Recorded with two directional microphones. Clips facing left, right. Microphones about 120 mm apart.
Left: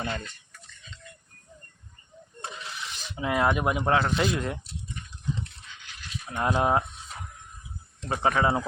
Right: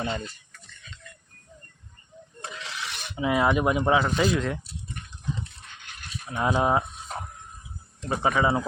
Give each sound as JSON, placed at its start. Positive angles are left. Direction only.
{"t": 0.0, "sound": "speech", "side_deg": -25}
{"t": 2.5, "sound": "a sound", "side_deg": -90}
{"t": 3.2, "sound": "speech", "side_deg": -5}
{"t": 4.2, "sound": "speech", "side_deg": 10}
{"t": 5.6, "sound": "a sound", "side_deg": -55}
{"t": 6.3, "sound": "speech", "side_deg": 0}
{"t": 8.0, "sound": "speech", "side_deg": -5}